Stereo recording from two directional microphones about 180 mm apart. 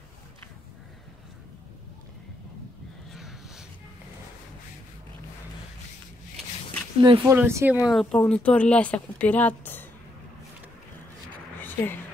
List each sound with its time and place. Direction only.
3.1 s crow: centre (ahead or behind)
7.0 s speech: 30° right (ahead or behind)
7.2 s speech: 15° right (ahead or behind)
7.9 s speech: 5° left (ahead or behind)
11.5 s a sound: 10° left (ahead or behind)